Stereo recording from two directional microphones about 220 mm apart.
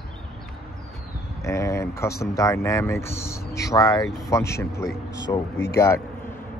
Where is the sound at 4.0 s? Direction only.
Centre (ahead or behind).